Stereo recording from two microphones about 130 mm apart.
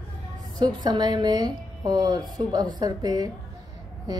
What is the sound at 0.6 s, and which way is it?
A woman's voice, 35° right (ahead or behind).